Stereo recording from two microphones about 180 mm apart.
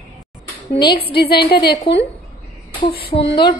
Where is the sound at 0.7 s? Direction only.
25° left (ahead or behind).